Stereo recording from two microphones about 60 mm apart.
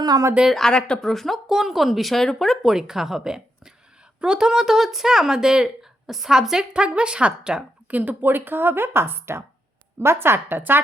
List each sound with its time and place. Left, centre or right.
0.5 s speech: centre
2.7 s speech: centre
7.9 s speech: right